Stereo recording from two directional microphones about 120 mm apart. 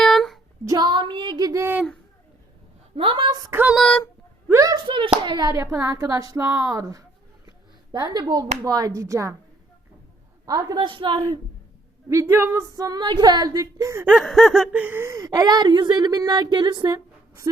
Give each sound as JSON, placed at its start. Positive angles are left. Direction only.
{"t": 0.0, "sound": "a sound", "side_deg": 0}
{"t": 0.6, "sound": "speech", "side_deg": -30}
{"t": 0.9, "sound": "a woman's voice", "side_deg": -40}
{"t": 2.9, "sound": "a woman's voice", "side_deg": -45}
{"t": 3.5, "sound": "a sound", "side_deg": -15}
{"t": 3.8, "sound": "speech", "side_deg": 5}
{"t": 4.4, "sound": "a sound", "side_deg": -25}
{"t": 4.9, "sound": "a woman's voice", "side_deg": -45}
{"t": 10.4, "sound": "a woman's voice", "side_deg": -30}
{"t": 10.8, "sound": "a woman's voice", "side_deg": -45}
{"t": 12.0, "sound": "a woman's voice", "side_deg": -20}
{"t": 14.1, "sound": "a sound", "side_deg": 0}
{"t": 15.3, "sound": "a woman's voice", "side_deg": -35}